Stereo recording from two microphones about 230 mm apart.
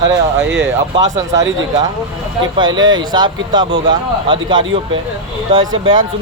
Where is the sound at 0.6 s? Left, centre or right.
Centre.